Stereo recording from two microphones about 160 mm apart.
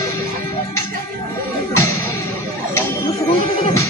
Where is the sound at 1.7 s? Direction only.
20° left (ahead or behind).